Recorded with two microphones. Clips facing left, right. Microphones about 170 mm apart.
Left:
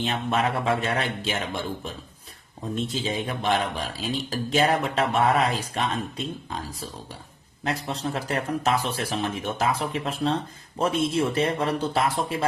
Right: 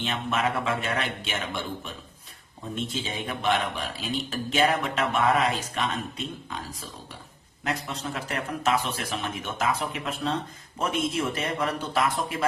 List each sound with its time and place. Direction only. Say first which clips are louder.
0.0 s speech: left 3 dB; 35° left (ahead or behind)